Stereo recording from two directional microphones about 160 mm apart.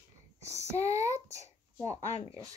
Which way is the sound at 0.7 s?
45° left (ahead or behind).